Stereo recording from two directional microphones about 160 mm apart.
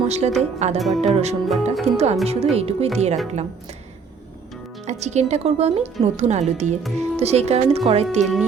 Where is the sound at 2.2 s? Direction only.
40° right (ahead or behind).